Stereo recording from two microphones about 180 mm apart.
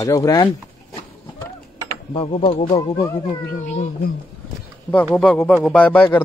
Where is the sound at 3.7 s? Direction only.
40° left (ahead or behind).